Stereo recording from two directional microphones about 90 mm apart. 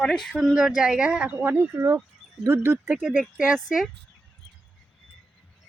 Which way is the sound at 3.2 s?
10° right (ahead or behind).